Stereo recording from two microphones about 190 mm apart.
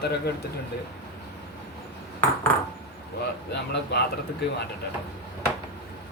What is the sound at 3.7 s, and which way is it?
Speech, 60° left (ahead or behind).